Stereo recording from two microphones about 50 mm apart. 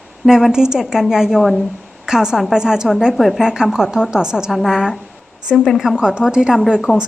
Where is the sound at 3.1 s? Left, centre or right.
Centre.